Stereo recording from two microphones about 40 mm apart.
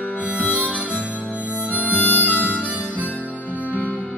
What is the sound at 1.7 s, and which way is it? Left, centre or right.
Harmonica, left.